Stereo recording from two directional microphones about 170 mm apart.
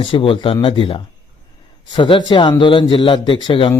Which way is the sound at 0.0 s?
30° left (ahead or behind).